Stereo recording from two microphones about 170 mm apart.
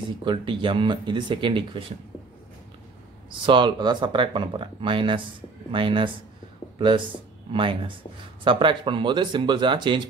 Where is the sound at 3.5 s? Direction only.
25° right (ahead or behind).